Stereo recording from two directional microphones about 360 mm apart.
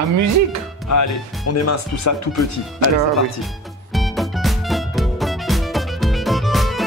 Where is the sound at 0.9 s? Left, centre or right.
Left.